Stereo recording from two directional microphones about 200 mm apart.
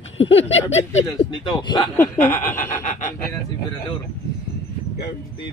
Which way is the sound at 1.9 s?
10° left (ahead or behind).